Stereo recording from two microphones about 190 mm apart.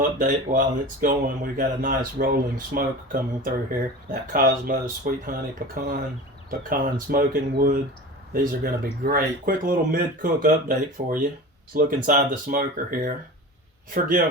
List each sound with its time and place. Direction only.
0.2 s speech: 45° right (ahead or behind)